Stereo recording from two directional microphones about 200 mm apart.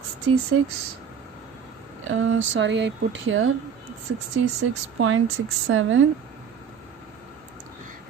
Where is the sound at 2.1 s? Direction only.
80° right.